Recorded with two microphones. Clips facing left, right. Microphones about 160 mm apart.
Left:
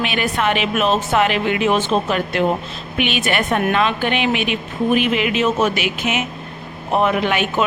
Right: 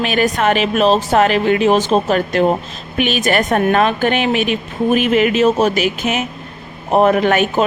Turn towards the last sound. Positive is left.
turn(degrees=-45)  # may be behind; listen again after turning